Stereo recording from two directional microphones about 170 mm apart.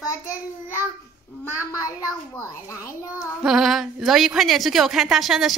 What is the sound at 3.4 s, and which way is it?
A woman's voice, centre (ahead or behind).